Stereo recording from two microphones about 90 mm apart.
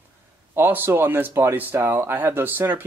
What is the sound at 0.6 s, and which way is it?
Speech, 25° right (ahead or behind).